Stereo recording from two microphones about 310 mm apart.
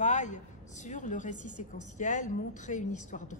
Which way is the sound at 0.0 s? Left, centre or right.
Left.